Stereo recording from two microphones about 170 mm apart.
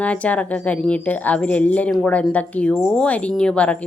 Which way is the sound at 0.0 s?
10° left (ahead or behind).